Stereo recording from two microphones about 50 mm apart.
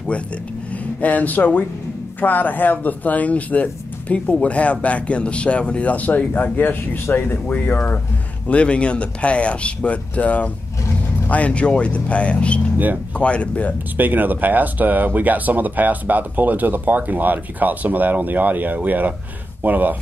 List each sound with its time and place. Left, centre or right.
1.0 s speech: left
7.4 s speech: left
8.5 s speech: left
12.7 s speech: right
13.2 s speech: left
13.9 s speech: right